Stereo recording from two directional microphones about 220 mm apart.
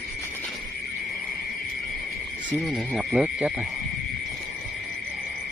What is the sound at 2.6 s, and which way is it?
Speech, 5° right (ahead or behind).